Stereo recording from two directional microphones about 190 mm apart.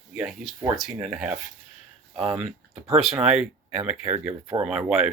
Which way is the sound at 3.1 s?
5° right (ahead or behind).